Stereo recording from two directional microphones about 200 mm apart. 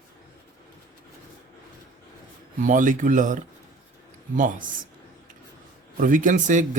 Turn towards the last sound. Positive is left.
turn(degrees=-40)  # may be behind; listen again after turning